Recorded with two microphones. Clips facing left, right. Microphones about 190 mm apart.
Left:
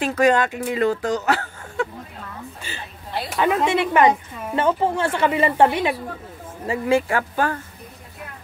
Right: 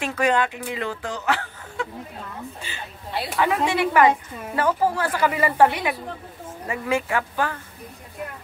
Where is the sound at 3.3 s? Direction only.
25° left (ahead or behind).